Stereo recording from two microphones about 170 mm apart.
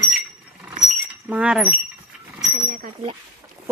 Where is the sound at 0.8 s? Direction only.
10° right (ahead or behind).